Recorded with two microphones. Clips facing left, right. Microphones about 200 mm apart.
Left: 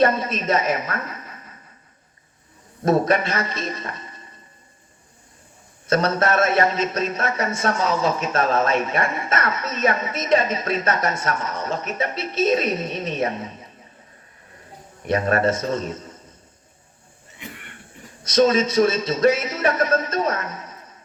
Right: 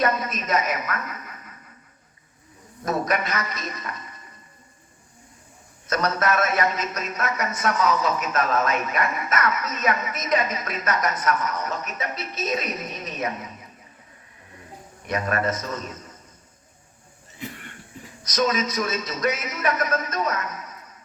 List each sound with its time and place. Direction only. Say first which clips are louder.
0.0 s a woman's voice: left 5 dB; 30° left (ahead or behind)
2.8 s a man's voice: left 6 dB; 30° left (ahead or behind)
5.9 s speech: left 4 dB; 30° left (ahead or behind)
15.0 s speech: left 5 dB; 30° left (ahead or behind)
17.3 s cough: right 3 dB; 35° right (ahead or behind)
18.2 s speech: left 7 dB; 30° left (ahead or behind)